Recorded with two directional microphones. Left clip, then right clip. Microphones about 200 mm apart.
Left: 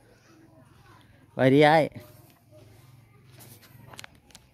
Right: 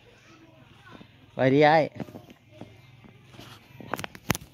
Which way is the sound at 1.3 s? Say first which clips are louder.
Left 1 dB; 30° left (ahead or behind).